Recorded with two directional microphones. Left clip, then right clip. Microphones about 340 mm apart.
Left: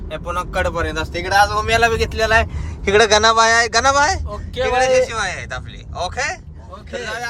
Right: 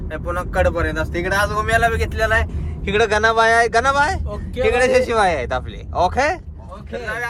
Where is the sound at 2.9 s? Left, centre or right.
Centre.